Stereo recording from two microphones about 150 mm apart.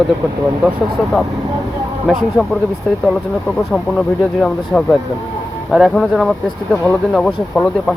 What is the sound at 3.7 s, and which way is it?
Speech, 5° left (ahead or behind).